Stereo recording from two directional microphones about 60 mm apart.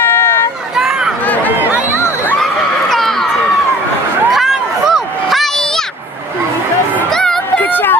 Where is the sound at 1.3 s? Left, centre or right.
Left.